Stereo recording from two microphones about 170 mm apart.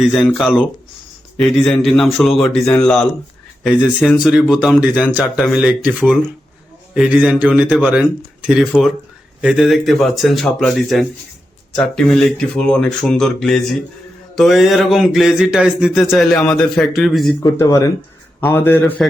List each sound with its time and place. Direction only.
0.1 s a man's voice: 5° left (ahead or behind)
6.9 s a man's voice: 5° right (ahead or behind)
17.4 s a man's voice: 20° left (ahead or behind)